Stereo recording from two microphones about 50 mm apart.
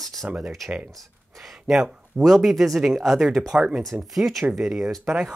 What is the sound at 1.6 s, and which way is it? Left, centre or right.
Speech, centre.